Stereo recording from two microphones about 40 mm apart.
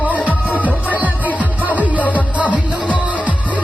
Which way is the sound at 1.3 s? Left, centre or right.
Right.